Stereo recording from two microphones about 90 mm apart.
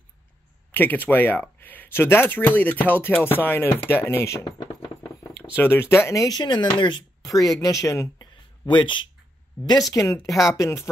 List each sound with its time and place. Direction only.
0.7 s speech: 20° left (ahead or behind)
4.0 s speech: 30° left (ahead or behind)
5.0 s a sound: 30° left (ahead or behind)
6.2 s speech: 50° left (ahead or behind)
7.2 s speech: 40° left (ahead or behind)
8.3 s a sound: 60° left (ahead or behind)
9.7 s speech: 40° left (ahead or behind)